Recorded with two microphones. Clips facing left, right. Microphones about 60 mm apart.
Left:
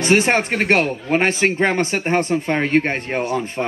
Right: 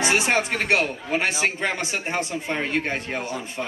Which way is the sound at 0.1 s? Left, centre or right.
Left.